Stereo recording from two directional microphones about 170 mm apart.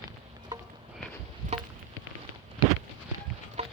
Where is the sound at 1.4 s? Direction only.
55° right (ahead or behind).